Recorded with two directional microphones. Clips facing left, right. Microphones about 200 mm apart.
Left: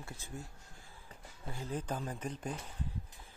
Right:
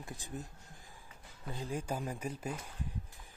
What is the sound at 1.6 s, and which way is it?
Speech, 10° right (ahead or behind).